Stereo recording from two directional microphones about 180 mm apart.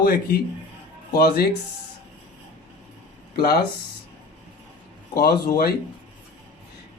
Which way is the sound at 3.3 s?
60° left (ahead or behind).